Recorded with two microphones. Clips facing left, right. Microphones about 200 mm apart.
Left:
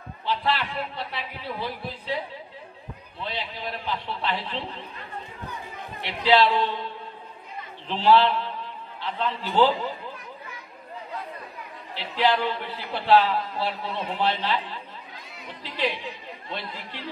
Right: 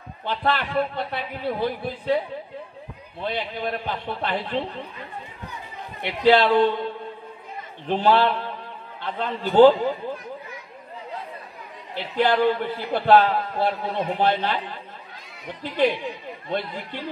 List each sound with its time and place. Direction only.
0.2 s a man's voice: 55° right (ahead or behind)
3.2 s a man's voice: 50° right (ahead or behind)
6.0 s a man's voice: 50° right (ahead or behind)
11.9 s a man's voice: 50° right (ahead or behind)